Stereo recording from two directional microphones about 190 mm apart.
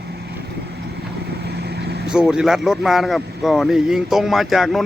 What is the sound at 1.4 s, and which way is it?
Vehicle, 60° right (ahead or behind).